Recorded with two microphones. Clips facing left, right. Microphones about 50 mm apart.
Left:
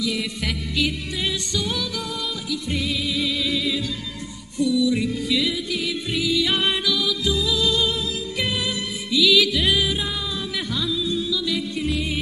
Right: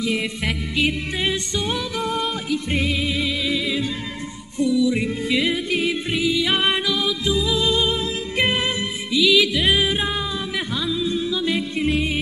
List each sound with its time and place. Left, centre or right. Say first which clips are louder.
0.0 s music: right 2 dB; right
3.4 s music: right 2 dB; right
8.4 s music: right 6 dB; right
9.1 s music: right 1 dB; right
9.7 s music: right 3 dB; right